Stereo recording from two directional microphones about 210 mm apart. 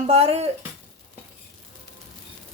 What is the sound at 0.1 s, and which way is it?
Speech, 30° right (ahead or behind).